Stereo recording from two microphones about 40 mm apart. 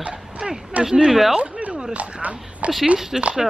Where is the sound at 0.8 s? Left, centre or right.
Centre.